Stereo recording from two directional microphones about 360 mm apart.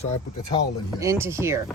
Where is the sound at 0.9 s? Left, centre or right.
Centre.